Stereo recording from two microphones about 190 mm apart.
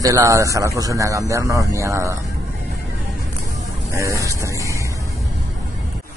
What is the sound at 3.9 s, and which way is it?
Speech, 15° right (ahead or behind).